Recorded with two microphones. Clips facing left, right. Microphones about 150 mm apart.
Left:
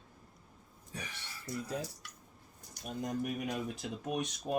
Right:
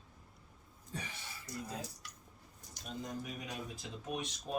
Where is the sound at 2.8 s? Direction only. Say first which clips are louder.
Left 6 dB; 65° left (ahead or behind).